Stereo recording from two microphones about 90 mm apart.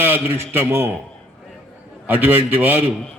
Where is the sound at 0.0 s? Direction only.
25° right (ahead or behind).